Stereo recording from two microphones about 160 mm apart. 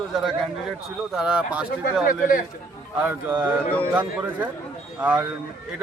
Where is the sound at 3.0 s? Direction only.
10° right (ahead or behind).